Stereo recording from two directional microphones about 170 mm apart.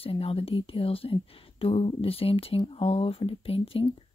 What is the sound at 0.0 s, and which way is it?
Speech, 35° left (ahead or behind).